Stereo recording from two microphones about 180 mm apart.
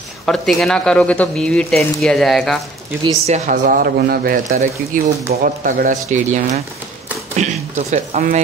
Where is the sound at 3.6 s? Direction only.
55° right (ahead or behind).